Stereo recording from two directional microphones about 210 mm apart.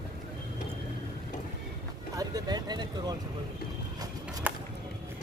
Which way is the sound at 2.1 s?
20° right (ahead or behind).